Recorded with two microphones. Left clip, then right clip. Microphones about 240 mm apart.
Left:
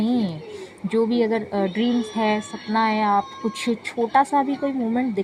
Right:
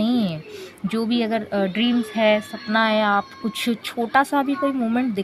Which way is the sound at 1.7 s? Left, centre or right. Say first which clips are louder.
Right 1 dB; right.